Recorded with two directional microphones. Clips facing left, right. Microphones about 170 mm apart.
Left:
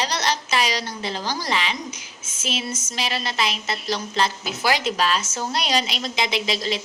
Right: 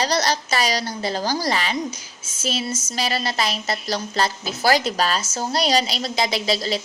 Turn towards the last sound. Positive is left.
turn(degrees=-35)  # may be behind; listen again after turning